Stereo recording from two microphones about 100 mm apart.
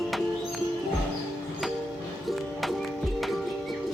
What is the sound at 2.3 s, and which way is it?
Music, centre (ahead or behind).